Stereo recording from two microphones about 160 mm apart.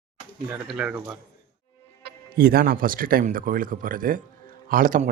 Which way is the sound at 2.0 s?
70° right (ahead or behind).